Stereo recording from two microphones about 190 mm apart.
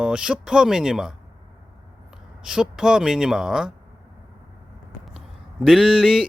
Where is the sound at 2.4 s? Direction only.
5° right (ahead or behind).